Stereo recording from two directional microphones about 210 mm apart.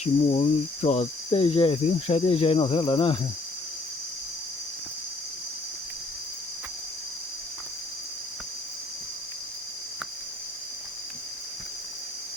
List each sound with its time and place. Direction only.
0.0 s cricket: 30° left (ahead or behind)